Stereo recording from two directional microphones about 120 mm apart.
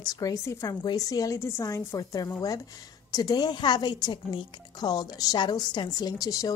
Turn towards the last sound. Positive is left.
turn(degrees=30)  # may be behind; listen again after turning